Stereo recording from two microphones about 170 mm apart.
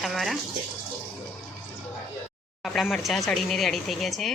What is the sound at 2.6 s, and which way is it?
A woman's voice, centre (ahead or behind).